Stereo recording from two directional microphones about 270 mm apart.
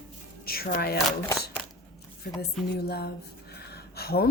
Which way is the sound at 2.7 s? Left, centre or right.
Left.